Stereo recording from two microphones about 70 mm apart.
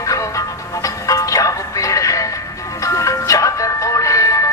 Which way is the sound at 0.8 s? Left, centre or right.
Left.